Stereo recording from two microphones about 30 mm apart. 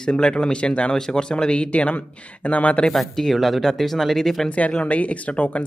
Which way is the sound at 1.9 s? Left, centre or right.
Left.